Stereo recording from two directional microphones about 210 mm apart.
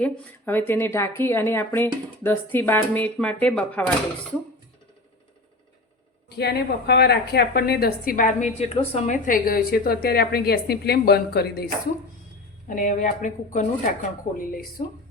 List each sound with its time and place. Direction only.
0.0 s speech: 10° left (ahead or behind)
6.3 s a woman's voice: 50° left (ahead or behind)
8.5 s a woman's voice: 25° left (ahead or behind); by 11.6 s 50° left (ahead or behind)
12.6 s a woman's voice: 35° left (ahead or behind)